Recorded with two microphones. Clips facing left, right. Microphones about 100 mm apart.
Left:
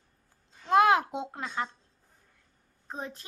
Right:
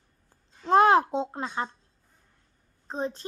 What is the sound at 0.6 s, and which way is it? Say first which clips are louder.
A child's voice: right 3 dB; 35° right (ahead or behind).